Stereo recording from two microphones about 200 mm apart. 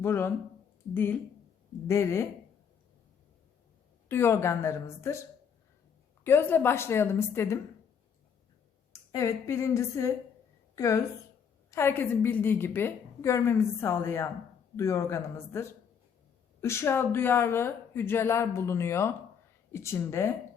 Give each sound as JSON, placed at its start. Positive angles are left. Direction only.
{"t": 0.0, "sound": "a woman's voice", "side_deg": 10}
{"t": 4.1, "sound": "a woman's voice", "side_deg": 10}
{"t": 6.2, "sound": "a woman's voice", "side_deg": 10}
{"t": 8.9, "sound": "a woman's voice", "side_deg": 15}